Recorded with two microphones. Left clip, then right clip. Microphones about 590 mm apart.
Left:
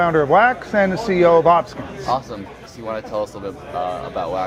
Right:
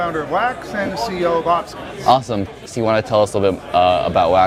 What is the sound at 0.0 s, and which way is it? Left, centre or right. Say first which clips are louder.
A man's voice: left 5 dB; left.